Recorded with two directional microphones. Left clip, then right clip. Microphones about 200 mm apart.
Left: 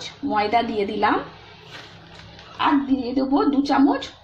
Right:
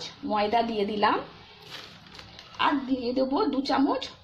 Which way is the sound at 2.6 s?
15° right (ahead or behind).